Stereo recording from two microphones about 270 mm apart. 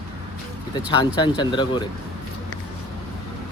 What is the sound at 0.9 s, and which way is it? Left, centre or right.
Speech, centre.